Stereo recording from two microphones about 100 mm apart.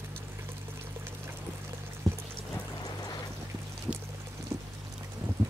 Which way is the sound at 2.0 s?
35° right (ahead or behind).